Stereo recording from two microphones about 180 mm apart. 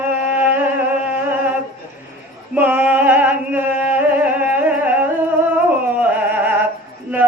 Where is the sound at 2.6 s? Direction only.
10° right (ahead or behind).